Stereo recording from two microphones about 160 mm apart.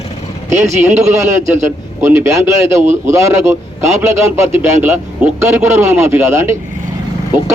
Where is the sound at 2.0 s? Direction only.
15° right (ahead or behind).